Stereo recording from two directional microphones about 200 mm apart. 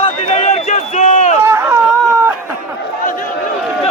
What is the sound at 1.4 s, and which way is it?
Chatter, 15° right (ahead or behind).